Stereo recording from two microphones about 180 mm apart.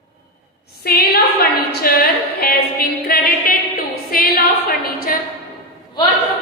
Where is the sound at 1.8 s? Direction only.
55° left (ahead or behind).